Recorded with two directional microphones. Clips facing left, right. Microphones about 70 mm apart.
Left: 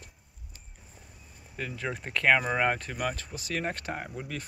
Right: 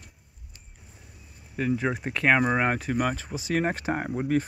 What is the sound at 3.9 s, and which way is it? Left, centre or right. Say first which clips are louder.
Speech: right 10 dB; right.